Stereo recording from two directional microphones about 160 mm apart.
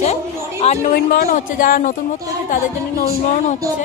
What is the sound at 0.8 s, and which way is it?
Speech, 65° left (ahead or behind).